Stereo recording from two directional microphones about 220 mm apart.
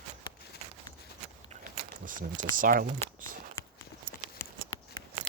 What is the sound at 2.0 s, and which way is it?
Speech, 35° right (ahead or behind).